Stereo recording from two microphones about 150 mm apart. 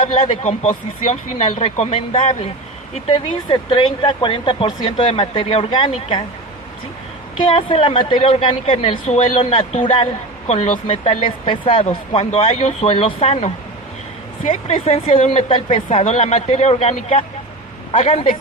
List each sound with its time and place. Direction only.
0.0 s speech: 35° left (ahead or behind)
7.4 s speech: 40° left (ahead or behind)
14.8 s speech: 40° left (ahead or behind)